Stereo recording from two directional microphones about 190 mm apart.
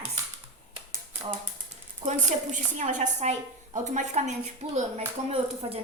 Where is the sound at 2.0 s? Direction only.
40° right (ahead or behind).